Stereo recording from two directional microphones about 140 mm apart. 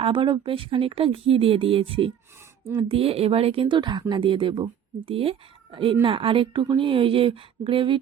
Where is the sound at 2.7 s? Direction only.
45° right (ahead or behind).